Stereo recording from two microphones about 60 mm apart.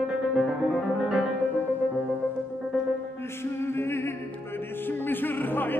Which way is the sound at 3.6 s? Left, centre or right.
Left.